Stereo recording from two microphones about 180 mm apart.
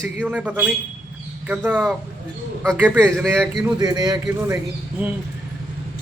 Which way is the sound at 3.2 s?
5° left (ahead or behind).